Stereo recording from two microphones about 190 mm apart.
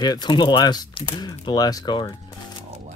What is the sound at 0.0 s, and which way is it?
Speech, 20° left (ahead or behind).